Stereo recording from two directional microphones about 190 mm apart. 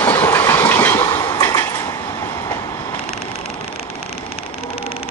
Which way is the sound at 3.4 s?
30° left (ahead or behind).